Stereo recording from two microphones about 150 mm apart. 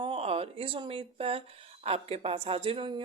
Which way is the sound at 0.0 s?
40° right (ahead or behind).